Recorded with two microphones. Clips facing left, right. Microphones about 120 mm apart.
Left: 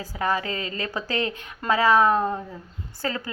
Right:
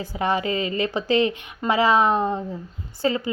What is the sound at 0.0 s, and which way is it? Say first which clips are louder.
A woman's voice: right 3 dB; 20° right (ahead or behind).